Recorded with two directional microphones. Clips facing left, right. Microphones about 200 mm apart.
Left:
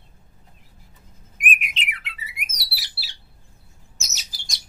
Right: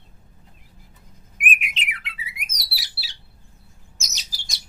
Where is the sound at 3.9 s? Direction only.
Centre (ahead or behind).